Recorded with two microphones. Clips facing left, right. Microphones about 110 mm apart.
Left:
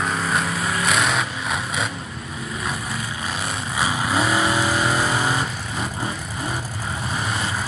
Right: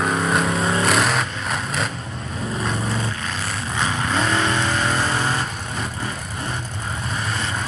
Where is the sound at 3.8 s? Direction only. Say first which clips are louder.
Left 1 dB; 10° left (ahead or behind).